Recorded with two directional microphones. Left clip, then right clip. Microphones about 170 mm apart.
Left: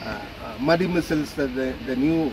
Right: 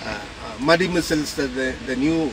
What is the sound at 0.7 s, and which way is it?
Speech, 5° left (ahead or behind).